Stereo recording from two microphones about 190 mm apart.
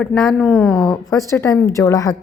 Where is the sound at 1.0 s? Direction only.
15° left (ahead or behind).